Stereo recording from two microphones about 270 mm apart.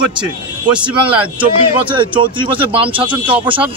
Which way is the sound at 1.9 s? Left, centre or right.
Centre.